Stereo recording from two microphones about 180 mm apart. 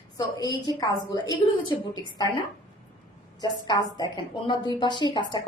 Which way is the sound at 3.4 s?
25° left (ahead or behind).